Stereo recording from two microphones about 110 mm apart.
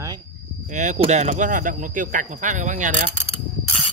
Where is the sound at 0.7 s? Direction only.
90° right.